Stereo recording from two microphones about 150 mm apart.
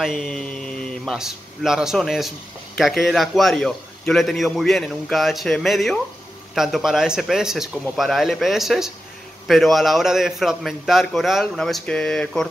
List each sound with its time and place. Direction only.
0.0 s a man's voice: centre (ahead or behind)